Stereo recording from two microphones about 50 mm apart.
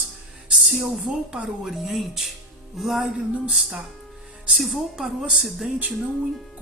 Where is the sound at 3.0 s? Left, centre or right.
Right.